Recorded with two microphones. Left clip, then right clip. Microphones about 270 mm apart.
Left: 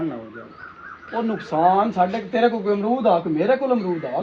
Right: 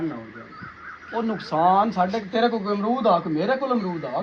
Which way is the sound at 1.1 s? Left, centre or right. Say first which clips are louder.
Left 2 dB; right.